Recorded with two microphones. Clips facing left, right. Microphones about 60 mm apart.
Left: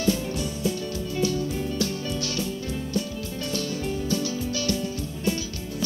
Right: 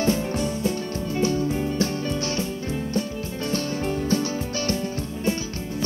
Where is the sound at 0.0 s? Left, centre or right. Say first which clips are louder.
Right 3 dB; right.